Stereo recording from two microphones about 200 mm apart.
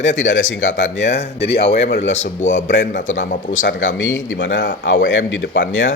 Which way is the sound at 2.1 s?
35° left (ahead or behind).